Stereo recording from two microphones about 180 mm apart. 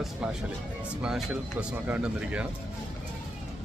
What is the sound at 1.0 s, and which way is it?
Speech, 5° right (ahead or behind).